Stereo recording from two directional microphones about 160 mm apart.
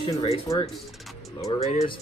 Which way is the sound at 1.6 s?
45° left (ahead or behind).